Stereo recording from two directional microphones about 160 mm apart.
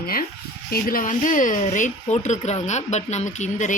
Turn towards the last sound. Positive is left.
turn(degrees=50)  # may be behind; listen again after turning